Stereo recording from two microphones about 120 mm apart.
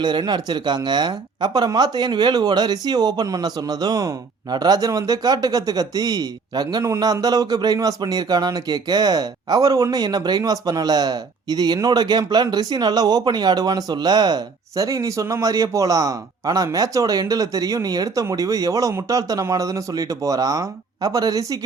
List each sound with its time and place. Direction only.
0.0 s a man's voice: 35° right (ahead or behind)